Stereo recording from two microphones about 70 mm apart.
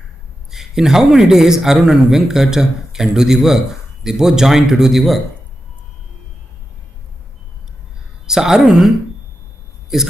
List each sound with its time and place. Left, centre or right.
0.5 s a man's voice: centre
8.3 s speech: centre